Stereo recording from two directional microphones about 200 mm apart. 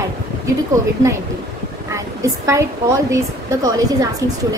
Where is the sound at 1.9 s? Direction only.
15° right (ahead or behind).